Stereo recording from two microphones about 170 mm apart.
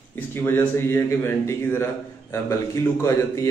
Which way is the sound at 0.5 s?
15° left (ahead or behind).